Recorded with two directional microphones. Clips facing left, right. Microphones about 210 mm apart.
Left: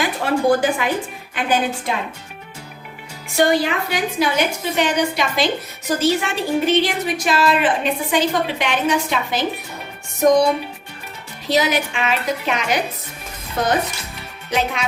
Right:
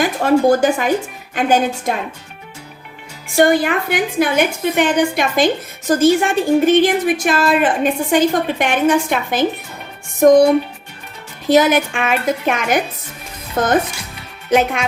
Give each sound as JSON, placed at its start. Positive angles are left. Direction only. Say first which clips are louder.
{"t": 0.0, "sound": "a woman's voice", "louder": "right 5 dB", "side_deg": -45}
{"t": 3.3, "sound": "a woman's voice", "louder": "right 4 dB", "side_deg": -50}